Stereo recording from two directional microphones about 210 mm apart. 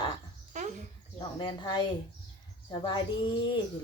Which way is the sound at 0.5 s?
35° right (ahead or behind).